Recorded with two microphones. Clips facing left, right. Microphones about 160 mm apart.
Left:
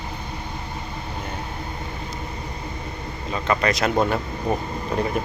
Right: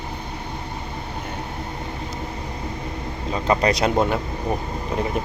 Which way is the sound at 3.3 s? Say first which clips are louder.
Right 2 dB; 30° right (ahead or behind).